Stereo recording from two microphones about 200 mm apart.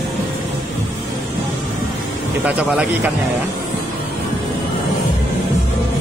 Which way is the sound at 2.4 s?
10° right (ahead or behind).